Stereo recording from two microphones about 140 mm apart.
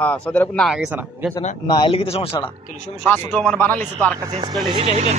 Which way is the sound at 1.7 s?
35° left (ahead or behind).